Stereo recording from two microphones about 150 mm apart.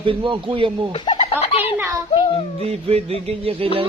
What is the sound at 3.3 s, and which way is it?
Speech, 40° right (ahead or behind).